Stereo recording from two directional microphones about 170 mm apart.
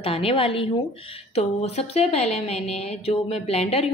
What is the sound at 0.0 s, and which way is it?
A woman's voice, 35° left (ahead or behind).